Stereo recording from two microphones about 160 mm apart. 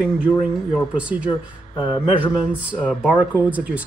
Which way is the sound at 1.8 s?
30° left (ahead or behind).